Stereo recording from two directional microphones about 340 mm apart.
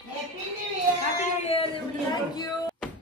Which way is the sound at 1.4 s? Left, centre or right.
Centre.